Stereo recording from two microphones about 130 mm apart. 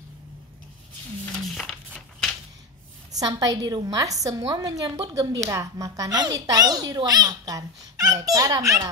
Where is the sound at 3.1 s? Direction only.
30° right (ahead or behind).